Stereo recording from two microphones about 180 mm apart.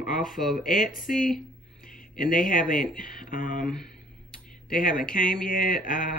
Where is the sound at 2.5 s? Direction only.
50° left (ahead or behind).